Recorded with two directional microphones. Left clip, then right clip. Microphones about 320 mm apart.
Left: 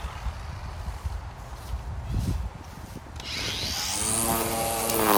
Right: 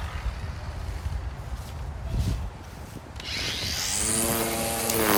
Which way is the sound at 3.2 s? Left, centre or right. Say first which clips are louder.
Right 1 dB; centre.